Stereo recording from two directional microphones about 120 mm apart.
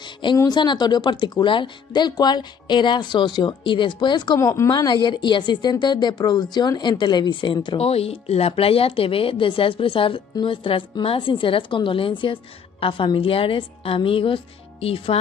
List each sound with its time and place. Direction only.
0.0 s a sound: 40° left (ahead or behind)
0.4 s speech: 40° left (ahead or behind)
4.4 s speech: 25° left (ahead or behind); by 7.8 s 40° left (ahead or behind)
7.8 s speech: 55° left (ahead or behind)